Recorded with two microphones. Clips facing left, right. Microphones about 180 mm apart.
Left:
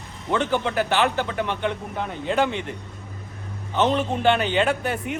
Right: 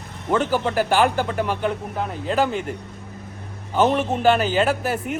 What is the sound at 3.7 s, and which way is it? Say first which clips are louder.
A man's voice: right 2 dB; 10° right (ahead or behind).